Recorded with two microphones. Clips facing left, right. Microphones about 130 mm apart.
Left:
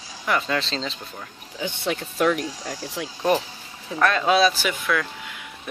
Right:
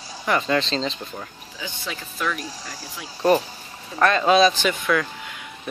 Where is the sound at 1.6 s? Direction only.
60° left (ahead or behind).